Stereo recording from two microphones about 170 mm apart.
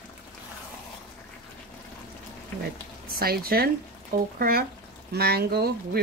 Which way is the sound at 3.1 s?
60° right (ahead or behind).